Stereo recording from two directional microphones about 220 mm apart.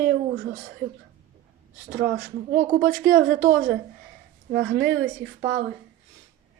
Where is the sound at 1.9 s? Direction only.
40° right (ahead or behind).